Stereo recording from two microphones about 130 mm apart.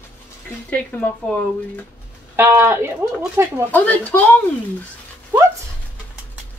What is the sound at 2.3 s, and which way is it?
Speech, 20° right (ahead or behind).